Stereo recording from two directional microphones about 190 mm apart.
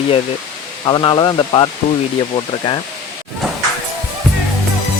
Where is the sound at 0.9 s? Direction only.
25° left (ahead or behind).